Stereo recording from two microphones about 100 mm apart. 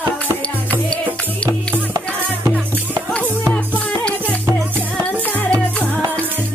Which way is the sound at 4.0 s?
10° left (ahead or behind).